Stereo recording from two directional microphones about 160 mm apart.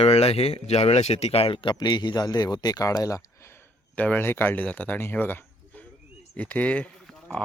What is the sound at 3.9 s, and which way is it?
A man's voice, 10° left (ahead or behind).